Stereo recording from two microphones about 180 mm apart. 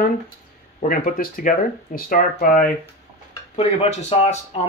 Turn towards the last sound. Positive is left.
turn(degrees=35)  # may be behind; listen again after turning